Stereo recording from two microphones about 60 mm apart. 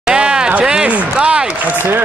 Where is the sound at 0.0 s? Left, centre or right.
Centre.